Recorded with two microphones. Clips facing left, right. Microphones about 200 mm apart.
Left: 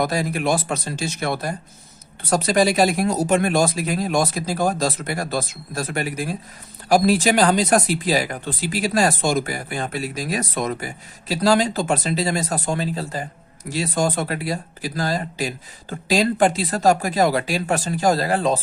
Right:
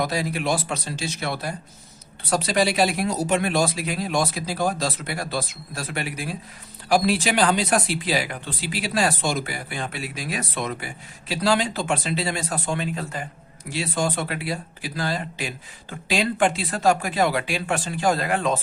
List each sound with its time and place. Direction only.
0.0 s speech: 45° left (ahead or behind)